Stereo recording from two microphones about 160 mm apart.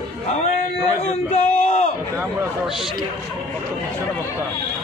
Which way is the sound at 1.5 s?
50° left (ahead or behind).